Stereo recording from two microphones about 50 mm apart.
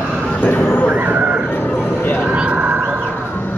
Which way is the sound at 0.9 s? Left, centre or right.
Right.